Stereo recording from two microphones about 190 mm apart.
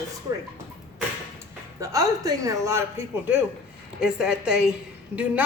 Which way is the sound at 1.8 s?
20° right (ahead or behind).